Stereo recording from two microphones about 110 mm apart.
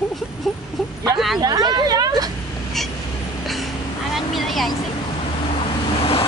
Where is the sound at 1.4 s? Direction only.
40° right (ahead or behind).